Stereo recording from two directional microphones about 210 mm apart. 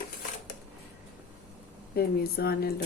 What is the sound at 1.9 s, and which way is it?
Speech, 50° left (ahead or behind).